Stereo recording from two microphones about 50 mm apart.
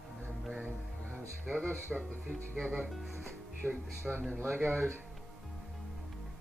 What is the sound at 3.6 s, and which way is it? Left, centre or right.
Speech, right.